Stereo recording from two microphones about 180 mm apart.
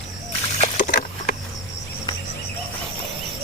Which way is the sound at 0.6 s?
50° left (ahead or behind).